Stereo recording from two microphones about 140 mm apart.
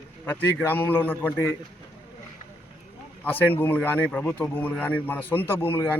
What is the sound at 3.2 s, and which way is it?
Speech, 15° left (ahead or behind).